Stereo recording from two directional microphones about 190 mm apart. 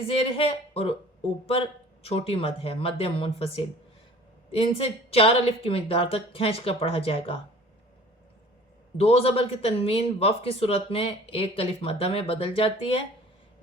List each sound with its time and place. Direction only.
0.0 s speech: 30° left (ahead or behind)
9.0 s speech: 30° left (ahead or behind)